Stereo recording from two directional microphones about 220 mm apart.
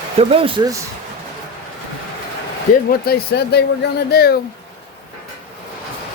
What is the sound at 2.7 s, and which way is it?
Speech, 40° left (ahead or behind).